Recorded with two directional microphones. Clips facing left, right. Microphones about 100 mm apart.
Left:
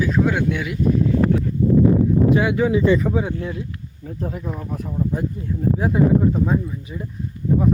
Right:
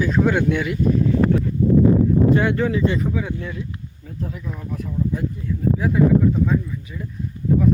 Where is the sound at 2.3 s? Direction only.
5° left (ahead or behind).